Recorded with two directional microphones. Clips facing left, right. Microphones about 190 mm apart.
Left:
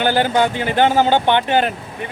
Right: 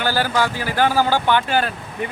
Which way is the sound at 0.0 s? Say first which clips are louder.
Left 4 dB; 20° left (ahead or behind).